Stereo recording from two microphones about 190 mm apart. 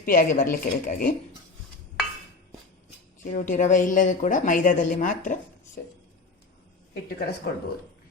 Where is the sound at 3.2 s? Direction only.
40° left (ahead or behind).